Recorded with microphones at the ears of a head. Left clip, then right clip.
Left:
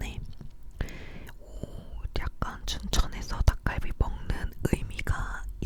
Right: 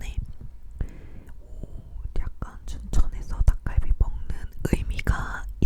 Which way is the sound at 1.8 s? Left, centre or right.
Left.